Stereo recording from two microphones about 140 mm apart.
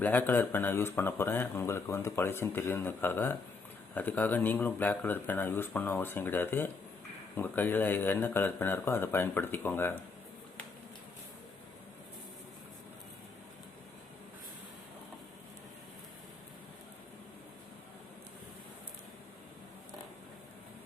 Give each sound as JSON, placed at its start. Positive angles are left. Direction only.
{"t": 0.0, "sound": "speech", "side_deg": 15}